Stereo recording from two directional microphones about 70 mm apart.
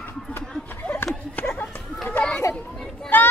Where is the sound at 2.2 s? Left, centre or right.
Left.